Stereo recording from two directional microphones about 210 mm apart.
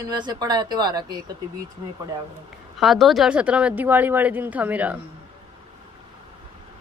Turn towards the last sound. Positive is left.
turn(degrees=-5)  # may be behind; listen again after turning